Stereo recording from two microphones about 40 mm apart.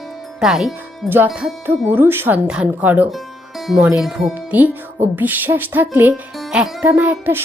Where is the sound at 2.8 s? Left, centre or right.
Right.